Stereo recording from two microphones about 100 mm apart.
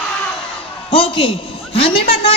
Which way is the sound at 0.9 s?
70° left (ahead or behind).